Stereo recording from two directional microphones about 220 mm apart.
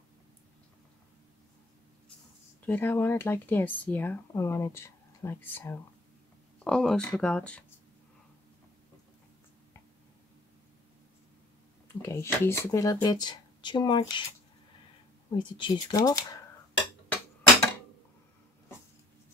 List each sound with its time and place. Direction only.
2.6 s speech: 10° left (ahead or behind)
11.9 s speech: 10° left (ahead or behind)
15.3 s speech: 20° left (ahead or behind)